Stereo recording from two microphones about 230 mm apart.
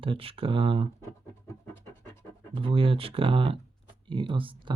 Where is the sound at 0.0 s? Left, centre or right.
Right.